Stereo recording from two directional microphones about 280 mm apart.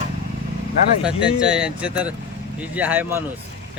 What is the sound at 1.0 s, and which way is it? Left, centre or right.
Speech, centre.